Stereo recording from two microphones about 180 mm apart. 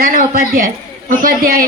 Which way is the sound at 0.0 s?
50° right (ahead or behind).